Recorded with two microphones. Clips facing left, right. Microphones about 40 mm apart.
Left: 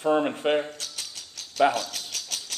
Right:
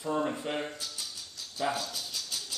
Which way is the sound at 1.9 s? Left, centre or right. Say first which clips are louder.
Left 3 dB; left.